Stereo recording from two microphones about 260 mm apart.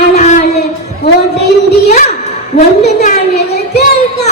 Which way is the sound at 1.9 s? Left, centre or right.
Left.